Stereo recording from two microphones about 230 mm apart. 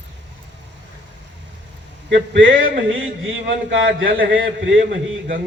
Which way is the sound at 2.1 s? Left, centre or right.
Right.